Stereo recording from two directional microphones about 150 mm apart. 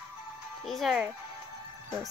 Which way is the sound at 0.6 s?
Centre (ahead or behind).